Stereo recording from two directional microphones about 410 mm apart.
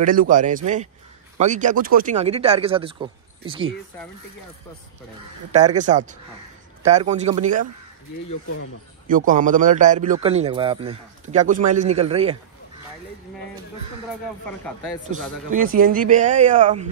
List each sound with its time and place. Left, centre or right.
0.0 s a man's voice: centre
5.8 s a man's voice: centre
9.0 s a man's voice: centre
15.5 s a man's voice: centre